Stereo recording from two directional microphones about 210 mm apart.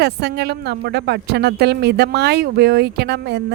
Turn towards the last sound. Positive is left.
turn(degrees=-50)  # may be behind; listen again after turning